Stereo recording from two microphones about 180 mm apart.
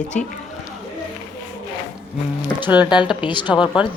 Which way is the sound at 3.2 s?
25° left (ahead or behind).